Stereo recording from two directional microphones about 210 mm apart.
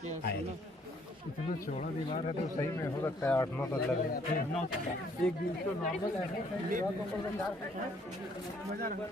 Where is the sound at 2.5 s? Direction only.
15° left (ahead or behind).